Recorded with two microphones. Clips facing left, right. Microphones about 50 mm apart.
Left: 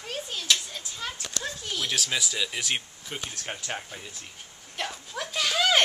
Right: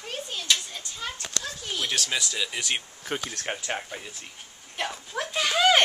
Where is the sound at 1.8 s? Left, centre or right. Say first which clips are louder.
Even; centre.